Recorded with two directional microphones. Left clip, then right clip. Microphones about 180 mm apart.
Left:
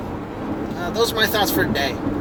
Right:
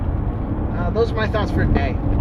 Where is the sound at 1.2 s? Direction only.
20° left (ahead or behind).